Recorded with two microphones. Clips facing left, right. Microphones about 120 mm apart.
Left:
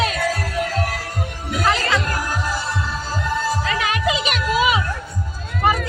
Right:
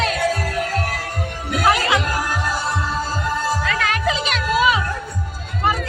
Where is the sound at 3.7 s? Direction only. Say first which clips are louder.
Even; 10° left (ahead or behind).